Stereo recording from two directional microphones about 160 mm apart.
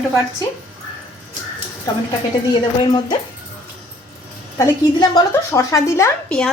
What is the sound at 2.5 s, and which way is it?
Speech, 25° left (ahead or behind).